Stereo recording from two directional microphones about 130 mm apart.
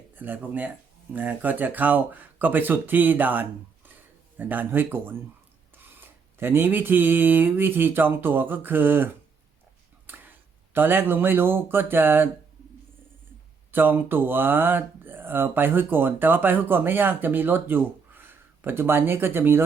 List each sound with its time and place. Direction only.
0.2 s speech: 15° right (ahead or behind)
10.8 s speech: 15° right (ahead or behind)
13.7 s speech: 15° right (ahead or behind)